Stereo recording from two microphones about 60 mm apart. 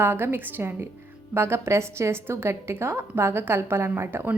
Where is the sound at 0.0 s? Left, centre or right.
Right.